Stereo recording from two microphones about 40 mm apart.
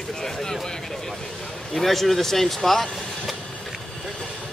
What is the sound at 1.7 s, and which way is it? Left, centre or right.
Speech, centre.